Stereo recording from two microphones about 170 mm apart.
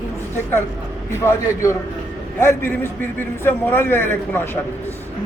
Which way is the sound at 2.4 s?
15° left (ahead or behind).